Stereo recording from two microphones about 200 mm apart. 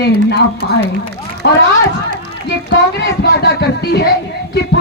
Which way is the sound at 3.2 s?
55° left (ahead or behind).